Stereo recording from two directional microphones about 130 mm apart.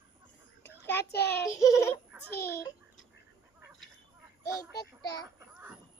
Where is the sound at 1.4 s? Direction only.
25° left (ahead or behind).